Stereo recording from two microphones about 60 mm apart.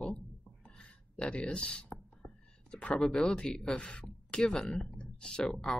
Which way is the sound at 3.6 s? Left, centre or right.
Centre.